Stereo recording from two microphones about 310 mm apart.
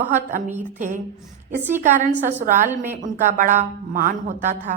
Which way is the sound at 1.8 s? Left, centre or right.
Right.